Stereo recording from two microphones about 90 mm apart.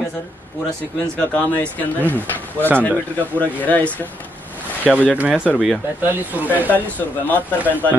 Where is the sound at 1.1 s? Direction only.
15° left (ahead or behind).